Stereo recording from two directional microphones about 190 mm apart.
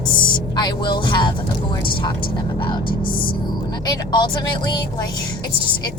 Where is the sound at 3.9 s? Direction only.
20° left (ahead or behind).